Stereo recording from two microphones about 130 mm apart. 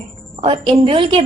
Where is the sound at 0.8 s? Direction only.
45° right (ahead or behind).